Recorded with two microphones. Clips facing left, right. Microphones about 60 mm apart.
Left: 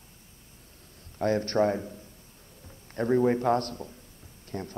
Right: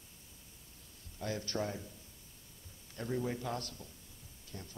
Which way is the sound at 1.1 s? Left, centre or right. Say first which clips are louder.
Left 13 dB; left.